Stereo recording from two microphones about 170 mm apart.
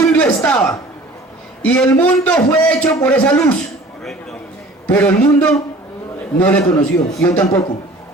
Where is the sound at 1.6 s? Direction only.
5° left (ahead or behind).